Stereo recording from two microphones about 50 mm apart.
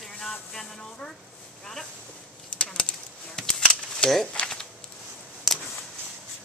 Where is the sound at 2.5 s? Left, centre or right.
Centre.